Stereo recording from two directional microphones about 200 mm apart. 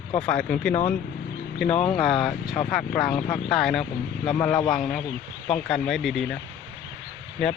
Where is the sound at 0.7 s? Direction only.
35° left (ahead or behind).